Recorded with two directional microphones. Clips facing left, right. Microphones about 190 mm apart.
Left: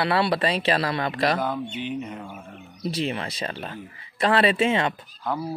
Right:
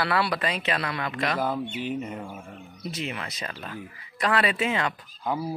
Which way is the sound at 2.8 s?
30° left (ahead or behind).